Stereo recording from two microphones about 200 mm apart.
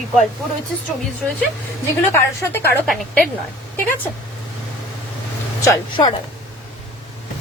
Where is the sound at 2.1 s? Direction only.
10° left (ahead or behind).